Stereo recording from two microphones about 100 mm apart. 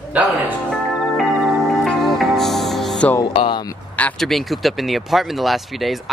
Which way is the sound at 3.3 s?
55° left (ahead or behind).